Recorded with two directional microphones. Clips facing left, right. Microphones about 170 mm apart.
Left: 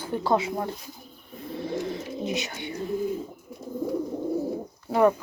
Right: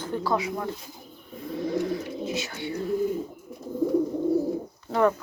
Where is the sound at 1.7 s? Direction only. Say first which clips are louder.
Right 3 dB; 25° left (ahead or behind).